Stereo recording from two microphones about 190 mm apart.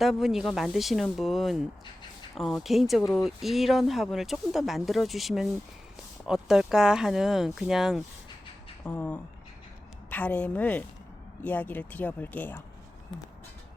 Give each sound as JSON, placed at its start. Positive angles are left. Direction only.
{"t": 0.0, "sound": "speech", "side_deg": 0}
{"t": 8.8, "sound": "speech", "side_deg": 10}